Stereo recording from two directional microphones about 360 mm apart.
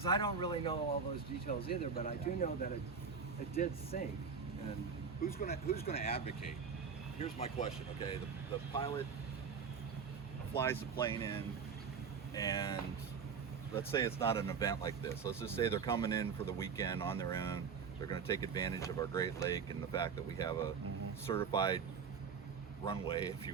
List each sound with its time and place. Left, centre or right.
0.0 s speech: centre
3.9 s speech: left
5.2 s speech: left
10.5 s speech: centre
13.7 s speech: centre
22.9 s speech: centre